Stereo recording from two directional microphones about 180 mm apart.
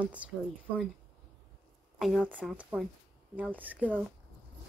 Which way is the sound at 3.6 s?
10° right (ahead or behind).